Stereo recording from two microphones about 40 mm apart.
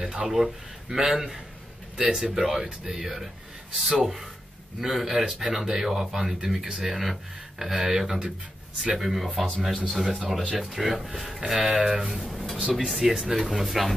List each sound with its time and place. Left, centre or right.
0.0 s speech: centre
12.1 s speech: centre